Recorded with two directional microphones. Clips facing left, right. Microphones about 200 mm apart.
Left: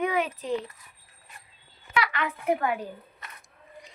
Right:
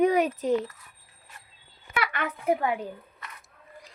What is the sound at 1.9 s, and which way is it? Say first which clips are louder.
Speech: left 2 dB; 50° right (ahead or behind).